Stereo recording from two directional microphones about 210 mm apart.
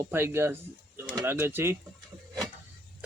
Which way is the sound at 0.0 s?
10° right (ahead or behind).